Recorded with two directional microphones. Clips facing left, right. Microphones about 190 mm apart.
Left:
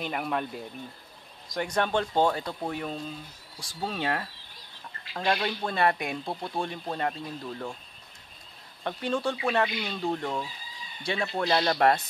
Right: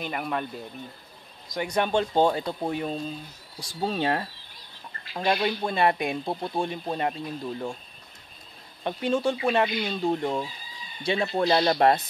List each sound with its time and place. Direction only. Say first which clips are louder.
0.0 s speech: even; centre (ahead or behind)
1.7 s speech: right 3 dB; 15° right (ahead or behind)
5.1 s speech: right 3 dB; 10° right (ahead or behind)
8.8 s speech: right 4 dB; 15° right (ahead or behind)